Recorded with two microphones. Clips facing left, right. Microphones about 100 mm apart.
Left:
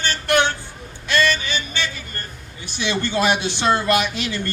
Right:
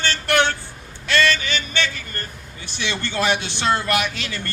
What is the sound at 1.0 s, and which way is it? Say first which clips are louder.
Music: even; 15° left (ahead or behind).